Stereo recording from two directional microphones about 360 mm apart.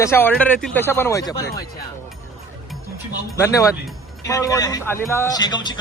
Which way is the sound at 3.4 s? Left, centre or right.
Centre.